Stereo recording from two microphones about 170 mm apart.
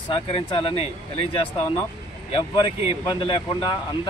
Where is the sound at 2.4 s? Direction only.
25° left (ahead or behind).